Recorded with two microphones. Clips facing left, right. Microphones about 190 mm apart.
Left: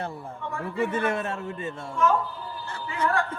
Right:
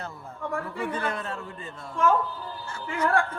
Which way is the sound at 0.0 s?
30° left (ahead or behind).